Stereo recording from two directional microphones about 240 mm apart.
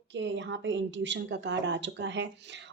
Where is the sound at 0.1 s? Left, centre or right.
Right.